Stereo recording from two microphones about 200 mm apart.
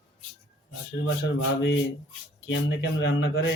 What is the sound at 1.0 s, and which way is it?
Speech, 75° left (ahead or behind).